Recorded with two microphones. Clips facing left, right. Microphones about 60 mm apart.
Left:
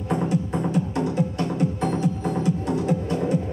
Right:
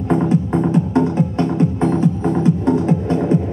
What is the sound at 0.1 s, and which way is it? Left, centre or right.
Music, right.